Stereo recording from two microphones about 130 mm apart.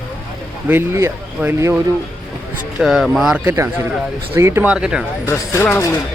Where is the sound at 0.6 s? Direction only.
15° right (ahead or behind).